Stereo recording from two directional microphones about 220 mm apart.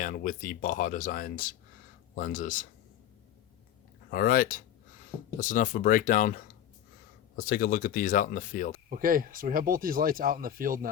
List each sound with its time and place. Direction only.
0.0 s speech: 35° left (ahead or behind)
4.1 s speech: 40° left (ahead or behind)
8.9 s speech: 40° right (ahead or behind)